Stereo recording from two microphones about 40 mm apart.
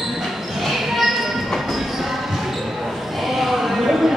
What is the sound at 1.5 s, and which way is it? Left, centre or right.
Basketball bounce, centre.